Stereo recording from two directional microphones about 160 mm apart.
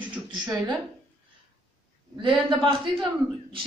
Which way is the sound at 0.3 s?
25° right (ahead or behind).